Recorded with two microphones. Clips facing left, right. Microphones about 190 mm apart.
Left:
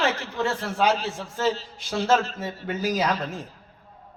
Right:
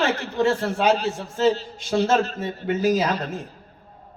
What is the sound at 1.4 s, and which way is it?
Speech, 25° right (ahead or behind).